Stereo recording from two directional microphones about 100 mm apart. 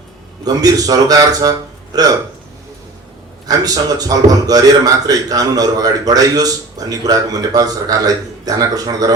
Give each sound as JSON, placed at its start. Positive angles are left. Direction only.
{"t": 0.4, "sound": "a man's voice", "side_deg": -40}
{"t": 3.5, "sound": "a man's voice", "side_deg": -40}